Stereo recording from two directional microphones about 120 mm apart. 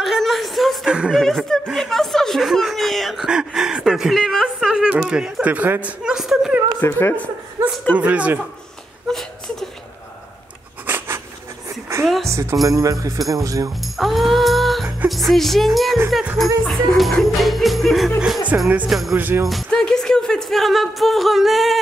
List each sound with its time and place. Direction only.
0.0 s a sound: centre (ahead or behind)
1.2 s speech: 5° left (ahead or behind)
6.8 s speech: 20° left (ahead or behind)
7.6 s a sound: 20° right (ahead or behind)
7.9 s a man's voice: 10° right (ahead or behind)
9.1 s laughter: 5° left (ahead or behind)
10.9 s a sound: 15° right (ahead or behind)
12.3 s speech: 25° right (ahead or behind)
13.9 s music: centre (ahead or behind)
15.0 s speech: centre (ahead or behind)
18.5 s a man's voice: 15° right (ahead or behind)
18.9 s speech: centre (ahead or behind)
19.1 s a man's voice: 15° right (ahead or behind)
19.4 s music: 5° left (ahead or behind)